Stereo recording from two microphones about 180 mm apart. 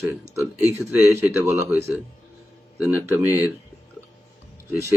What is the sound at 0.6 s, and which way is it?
Speech, 15° left (ahead or behind).